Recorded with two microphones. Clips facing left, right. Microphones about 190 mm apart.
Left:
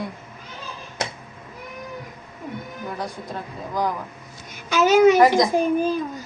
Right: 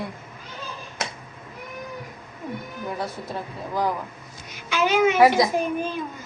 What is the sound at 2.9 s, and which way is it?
Speech, 5° right (ahead or behind).